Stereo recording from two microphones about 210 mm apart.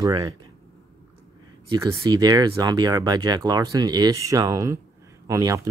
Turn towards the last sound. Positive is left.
turn(degrees=-15)  # may be behind; listen again after turning